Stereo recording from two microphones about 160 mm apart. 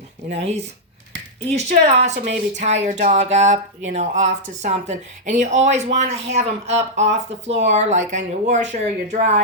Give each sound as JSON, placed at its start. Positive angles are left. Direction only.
{"t": 1.5, "sound": "speech", "side_deg": -45}